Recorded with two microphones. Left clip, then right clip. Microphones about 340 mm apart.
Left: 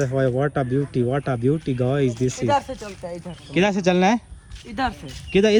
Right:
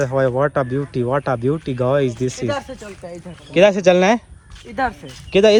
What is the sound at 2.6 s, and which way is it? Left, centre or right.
Speech, left.